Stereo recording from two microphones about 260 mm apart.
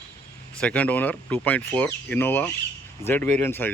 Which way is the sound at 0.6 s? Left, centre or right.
Centre.